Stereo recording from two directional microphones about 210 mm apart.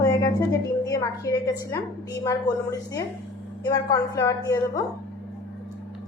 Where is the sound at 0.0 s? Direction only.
15° left (ahead or behind).